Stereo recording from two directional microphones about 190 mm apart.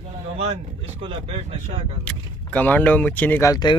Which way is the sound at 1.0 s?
30° right (ahead or behind).